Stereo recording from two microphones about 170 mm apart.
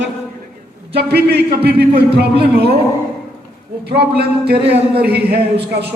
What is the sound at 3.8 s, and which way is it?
Speech, 70° right (ahead or behind).